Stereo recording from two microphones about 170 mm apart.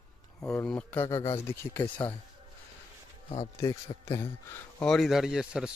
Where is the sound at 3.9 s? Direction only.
30° left (ahead or behind).